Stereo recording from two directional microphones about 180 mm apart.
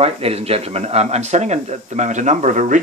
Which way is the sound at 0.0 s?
35° right (ahead or behind).